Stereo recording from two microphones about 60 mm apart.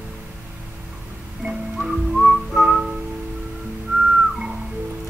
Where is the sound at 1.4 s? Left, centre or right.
Centre.